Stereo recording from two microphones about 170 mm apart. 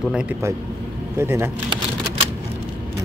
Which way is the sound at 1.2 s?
15° right (ahead or behind).